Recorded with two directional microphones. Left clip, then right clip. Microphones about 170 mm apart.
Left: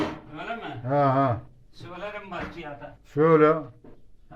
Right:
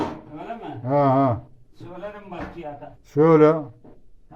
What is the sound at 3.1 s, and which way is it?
Speech, 20° right (ahead or behind).